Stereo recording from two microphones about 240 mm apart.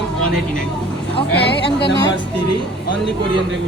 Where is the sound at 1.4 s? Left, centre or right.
Left.